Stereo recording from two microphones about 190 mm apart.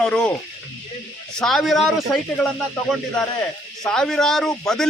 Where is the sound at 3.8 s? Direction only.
5° left (ahead or behind).